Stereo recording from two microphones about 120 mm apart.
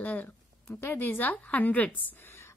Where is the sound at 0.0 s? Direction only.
15° left (ahead or behind).